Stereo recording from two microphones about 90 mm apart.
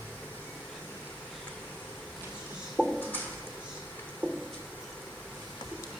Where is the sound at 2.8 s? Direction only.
15° left (ahead or behind).